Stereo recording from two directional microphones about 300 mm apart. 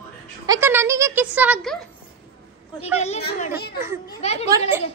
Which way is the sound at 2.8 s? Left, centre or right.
Left.